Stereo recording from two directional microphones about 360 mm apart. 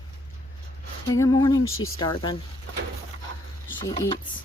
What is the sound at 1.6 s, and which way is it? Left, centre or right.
Speech, left.